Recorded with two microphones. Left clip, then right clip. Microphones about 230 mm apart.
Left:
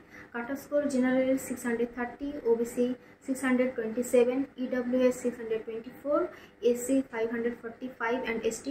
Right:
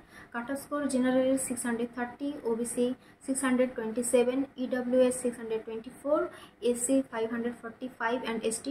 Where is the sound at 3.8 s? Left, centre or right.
Centre.